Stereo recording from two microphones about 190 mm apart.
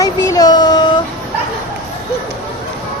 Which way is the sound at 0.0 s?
20° left (ahead or behind).